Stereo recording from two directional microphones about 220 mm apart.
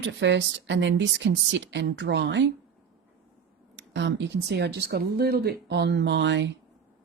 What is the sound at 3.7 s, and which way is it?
Speech, 55° right (ahead or behind).